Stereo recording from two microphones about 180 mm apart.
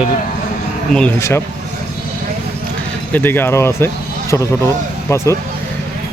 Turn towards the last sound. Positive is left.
turn(degrees=15)  # may be behind; listen again after turning